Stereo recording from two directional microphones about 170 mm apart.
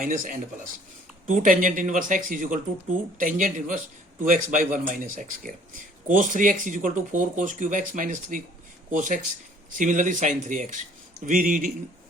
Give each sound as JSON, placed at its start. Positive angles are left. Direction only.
{"t": 0.0, "sound": "speech", "side_deg": -55}